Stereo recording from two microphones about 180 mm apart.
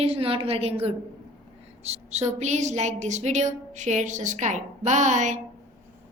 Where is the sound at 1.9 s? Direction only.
40° right (ahead or behind).